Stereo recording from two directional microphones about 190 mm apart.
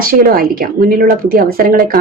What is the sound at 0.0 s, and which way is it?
Speech, 50° right (ahead or behind).